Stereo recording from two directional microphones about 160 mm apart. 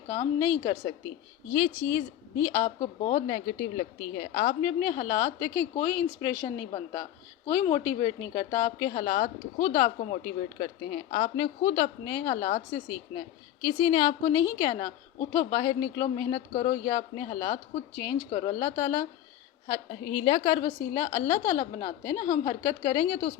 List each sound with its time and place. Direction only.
0.2 s a woman's voice: 20° left (ahead or behind)
3.2 s a woman's voice: 30° left (ahead or behind)
10.2 s a woman's voice: 30° left (ahead or behind)